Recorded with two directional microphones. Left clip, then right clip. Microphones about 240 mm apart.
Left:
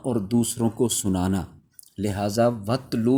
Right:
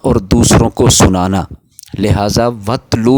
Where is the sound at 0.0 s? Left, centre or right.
Right.